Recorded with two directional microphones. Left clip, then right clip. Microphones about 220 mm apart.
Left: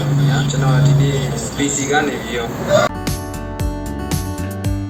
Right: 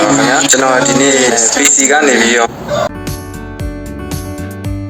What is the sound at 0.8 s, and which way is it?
A man's voice, 55° right (ahead or behind).